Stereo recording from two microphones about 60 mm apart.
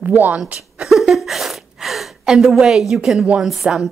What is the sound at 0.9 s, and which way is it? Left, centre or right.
A woman's voice, centre.